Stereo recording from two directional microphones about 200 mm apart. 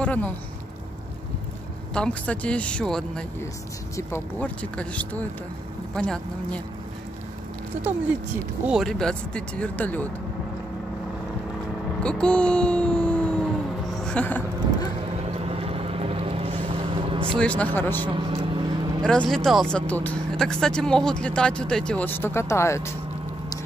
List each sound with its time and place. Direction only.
0.0 s speech: 5° left (ahead or behind)
2.0 s speech: 5° left (ahead or behind)
8.6 s speech: centre (ahead or behind)
12.0 s speech: 5° left (ahead or behind)
13.9 s a sound: 5° left (ahead or behind)
15.3 s vehicle: 30° right (ahead or behind)
17.4 s speech: 5° left (ahead or behind)
18.1 s vehicle: 25° right (ahead or behind)
19.0 s speech: 5° left (ahead or behind)